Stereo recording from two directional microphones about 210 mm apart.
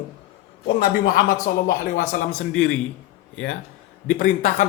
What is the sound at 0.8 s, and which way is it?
Speech, 40° left (ahead or behind).